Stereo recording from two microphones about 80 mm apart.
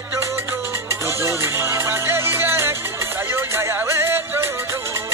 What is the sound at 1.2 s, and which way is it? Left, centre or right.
Music, right.